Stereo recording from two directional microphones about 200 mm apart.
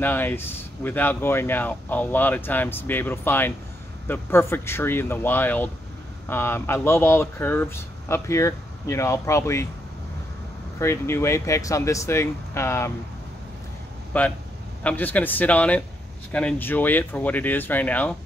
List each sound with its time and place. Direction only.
0.0 s speech: 10° left (ahead or behind)
10.8 s speech: 15° left (ahead or behind)
14.1 s speech: 10° left (ahead or behind)